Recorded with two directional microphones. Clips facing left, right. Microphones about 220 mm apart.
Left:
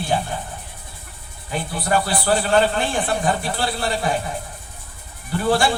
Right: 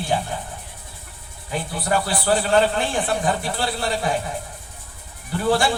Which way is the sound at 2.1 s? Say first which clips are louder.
Left 1 dB; 20° right (ahead or behind).